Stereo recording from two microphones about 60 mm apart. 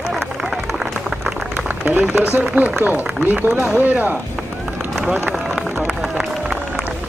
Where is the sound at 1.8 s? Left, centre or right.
Right.